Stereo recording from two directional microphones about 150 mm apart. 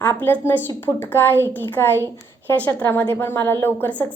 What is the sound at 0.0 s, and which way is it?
A woman's voice, 10° left (ahead or behind).